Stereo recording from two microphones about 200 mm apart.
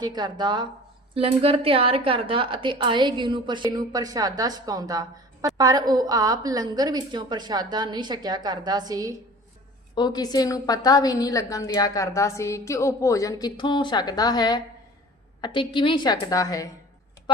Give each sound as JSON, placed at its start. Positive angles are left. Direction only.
{"t": 0.0, "sound": "a woman's voice", "side_deg": -20}
{"t": 9.9, "sound": "a woman's voice", "side_deg": 20}